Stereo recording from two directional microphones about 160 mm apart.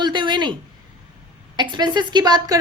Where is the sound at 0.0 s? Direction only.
30° right (ahead or behind).